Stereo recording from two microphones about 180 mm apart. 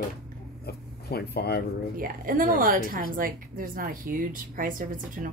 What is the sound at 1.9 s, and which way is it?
Speech, 50° right (ahead or behind).